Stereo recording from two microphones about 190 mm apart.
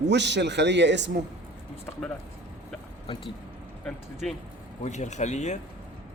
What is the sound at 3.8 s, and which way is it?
Speech, centre (ahead or behind).